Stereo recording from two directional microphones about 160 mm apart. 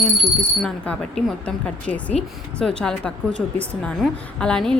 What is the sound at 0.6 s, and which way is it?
A woman's voice, centre (ahead or behind).